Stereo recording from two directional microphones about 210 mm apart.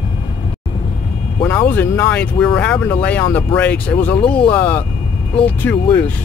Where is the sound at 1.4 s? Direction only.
10° left (ahead or behind).